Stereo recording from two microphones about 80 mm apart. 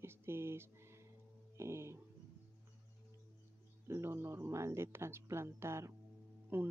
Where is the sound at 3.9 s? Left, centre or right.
Right.